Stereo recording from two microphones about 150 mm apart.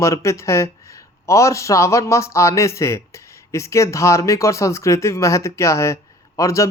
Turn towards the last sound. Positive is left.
turn(degrees=20)  # may be behind; listen again after turning